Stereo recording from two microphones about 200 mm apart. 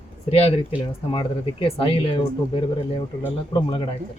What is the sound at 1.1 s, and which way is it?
Speech, 25° left (ahead or behind).